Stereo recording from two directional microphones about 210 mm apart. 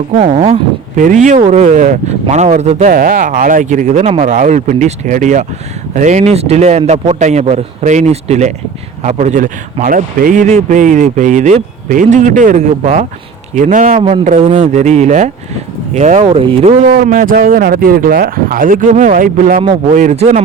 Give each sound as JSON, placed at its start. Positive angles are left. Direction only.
{"t": 0.2, "sound": "a man's voice", "side_deg": -30}
{"t": 14.0, "sound": "a man's voice", "side_deg": -30}